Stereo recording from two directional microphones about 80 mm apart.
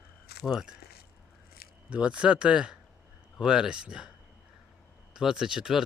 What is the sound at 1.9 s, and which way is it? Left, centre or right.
Speech, centre.